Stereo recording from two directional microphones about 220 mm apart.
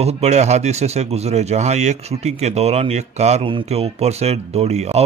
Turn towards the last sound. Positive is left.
turn(degrees=-30)  # may be behind; listen again after turning